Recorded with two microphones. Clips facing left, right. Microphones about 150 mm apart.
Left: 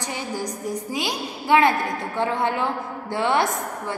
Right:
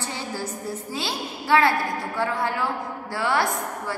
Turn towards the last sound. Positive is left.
turn(degrees=20)  # may be behind; listen again after turning